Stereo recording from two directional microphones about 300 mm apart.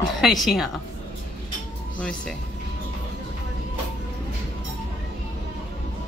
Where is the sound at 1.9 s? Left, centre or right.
Centre.